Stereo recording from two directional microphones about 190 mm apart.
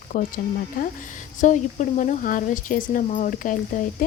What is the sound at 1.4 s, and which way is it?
Speech, 40° left (ahead or behind).